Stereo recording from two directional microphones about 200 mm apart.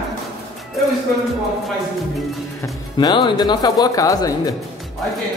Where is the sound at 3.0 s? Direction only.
20° left (ahead or behind).